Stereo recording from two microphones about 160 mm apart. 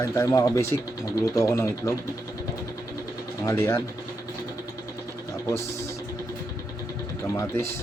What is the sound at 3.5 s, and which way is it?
Speech, 15° left (ahead or behind).